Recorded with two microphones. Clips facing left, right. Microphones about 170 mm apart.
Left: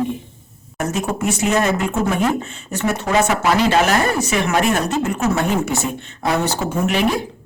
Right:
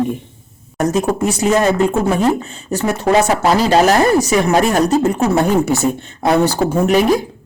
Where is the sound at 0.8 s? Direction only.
35° right (ahead or behind).